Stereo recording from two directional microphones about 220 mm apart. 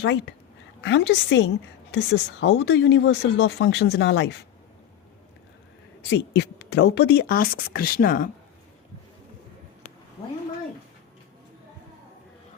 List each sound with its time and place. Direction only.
0.0 s a woman's voice: 55° left (ahead or behind)
6.1 s speech: 50° left (ahead or behind)